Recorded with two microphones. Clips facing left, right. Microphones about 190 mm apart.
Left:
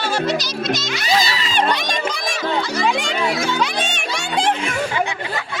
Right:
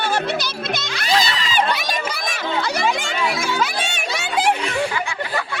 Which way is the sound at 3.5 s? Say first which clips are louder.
Left 1 dB; 5° right (ahead or behind).